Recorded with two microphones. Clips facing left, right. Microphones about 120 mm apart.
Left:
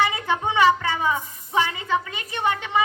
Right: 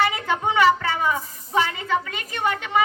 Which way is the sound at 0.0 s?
20° left (ahead or behind).